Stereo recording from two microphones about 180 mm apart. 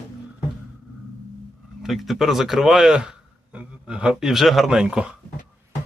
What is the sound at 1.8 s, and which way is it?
A man's voice, centre (ahead or behind).